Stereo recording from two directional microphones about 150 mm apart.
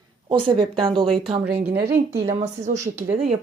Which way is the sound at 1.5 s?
90° right.